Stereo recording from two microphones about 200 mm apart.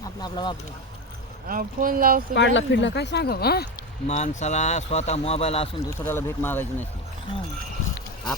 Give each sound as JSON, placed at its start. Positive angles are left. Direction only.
{"t": 0.2, "sound": "speech", "side_deg": 20}
{"t": 1.5, "sound": "speech", "side_deg": -45}
{"t": 2.3, "sound": "speech", "side_deg": 65}
{"t": 4.0, "sound": "speech", "side_deg": 35}
{"t": 5.8, "sound": "speech", "side_deg": 15}